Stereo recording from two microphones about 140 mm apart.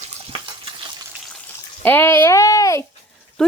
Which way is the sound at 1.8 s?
15° left (ahead or behind).